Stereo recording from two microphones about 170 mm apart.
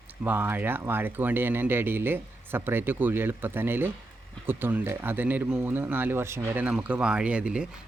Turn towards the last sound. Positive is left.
turn(degrees=-5)  # may be behind; listen again after turning